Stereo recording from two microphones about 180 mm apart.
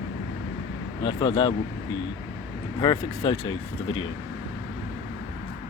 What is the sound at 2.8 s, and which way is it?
Speech, 25° left (ahead or behind).